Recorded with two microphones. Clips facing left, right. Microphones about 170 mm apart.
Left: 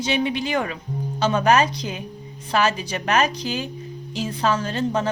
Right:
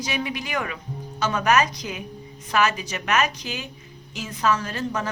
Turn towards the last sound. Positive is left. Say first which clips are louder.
# left 5 dB
turn(degrees=30)  # may be behind; listen again after turning